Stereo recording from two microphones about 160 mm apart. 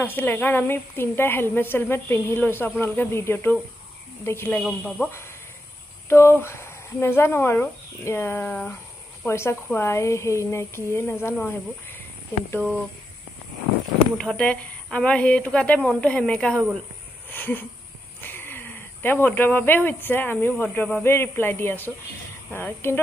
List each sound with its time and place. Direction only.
0.0 s a woman's voice: 10° left (ahead or behind)
6.0 s a woman's voice: 15° left (ahead or behind)
14.1 s a woman's voice: 5° left (ahead or behind)